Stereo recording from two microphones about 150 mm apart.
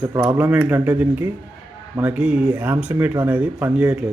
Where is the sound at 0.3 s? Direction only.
10° right (ahead or behind).